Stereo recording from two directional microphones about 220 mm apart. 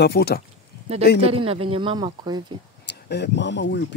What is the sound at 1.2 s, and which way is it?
Speech, 25° right (ahead or behind).